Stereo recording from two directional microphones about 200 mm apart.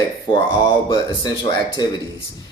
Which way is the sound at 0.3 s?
25° left (ahead or behind).